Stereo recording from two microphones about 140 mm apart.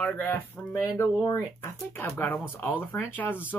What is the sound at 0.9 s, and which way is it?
Speech, 25° left (ahead or behind).